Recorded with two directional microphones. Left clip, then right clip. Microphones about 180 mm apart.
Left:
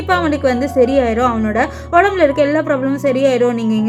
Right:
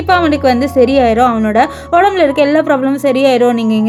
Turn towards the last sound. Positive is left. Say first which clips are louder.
# right 4 dB
turn(degrees=-20)  # may be behind; listen again after turning